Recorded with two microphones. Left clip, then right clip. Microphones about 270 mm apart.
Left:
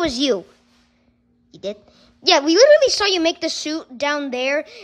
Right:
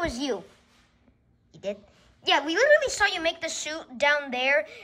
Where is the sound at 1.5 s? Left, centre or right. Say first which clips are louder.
Left 5 dB; centre.